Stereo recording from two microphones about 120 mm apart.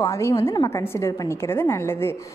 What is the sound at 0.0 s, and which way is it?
A woman's voice, 25° left (ahead or behind).